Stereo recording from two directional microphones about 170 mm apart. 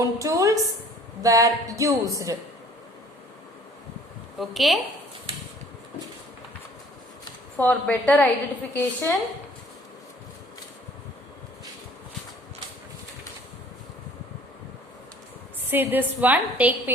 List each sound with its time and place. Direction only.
0.0 s speech: 20° right (ahead or behind)
4.4 s a woman's voice: centre (ahead or behind)
7.5 s a woman's voice: 10° left (ahead or behind)
15.7 s a woman's voice: 10° right (ahead or behind)